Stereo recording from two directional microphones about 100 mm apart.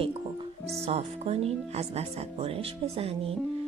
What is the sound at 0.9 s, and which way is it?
Speech, 85° right.